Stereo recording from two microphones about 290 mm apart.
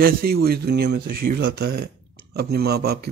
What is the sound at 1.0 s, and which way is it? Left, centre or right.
Speech, right.